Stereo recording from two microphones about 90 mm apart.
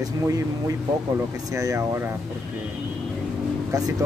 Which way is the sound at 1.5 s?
35° right (ahead or behind).